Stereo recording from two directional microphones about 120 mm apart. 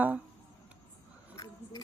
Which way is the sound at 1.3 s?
35° left (ahead or behind).